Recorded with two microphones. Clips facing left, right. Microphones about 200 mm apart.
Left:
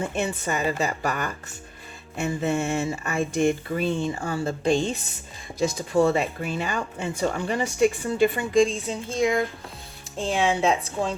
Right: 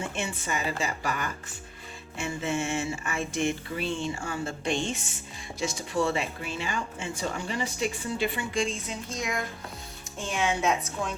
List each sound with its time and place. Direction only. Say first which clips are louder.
0.0 s a woman's voice: left 6 dB; 40° left (ahead or behind)